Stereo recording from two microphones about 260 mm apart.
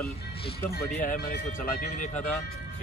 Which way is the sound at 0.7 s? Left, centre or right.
Left.